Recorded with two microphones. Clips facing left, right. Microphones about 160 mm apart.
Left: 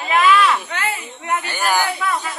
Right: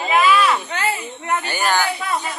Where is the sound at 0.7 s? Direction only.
35° right (ahead or behind).